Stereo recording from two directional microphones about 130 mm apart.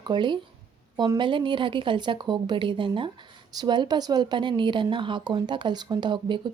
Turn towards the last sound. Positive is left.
turn(degrees=-35)  # may be behind; listen again after turning